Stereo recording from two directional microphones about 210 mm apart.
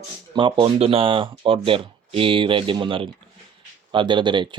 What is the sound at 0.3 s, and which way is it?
Speech, 20° right (ahead or behind).